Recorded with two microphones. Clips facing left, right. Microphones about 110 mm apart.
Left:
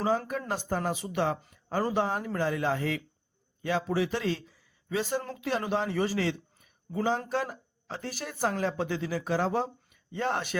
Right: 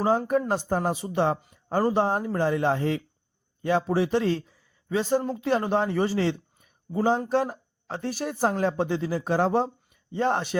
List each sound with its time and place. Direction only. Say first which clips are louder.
0.3 s a man's voice: right 8 dB; 45° right (ahead or behind)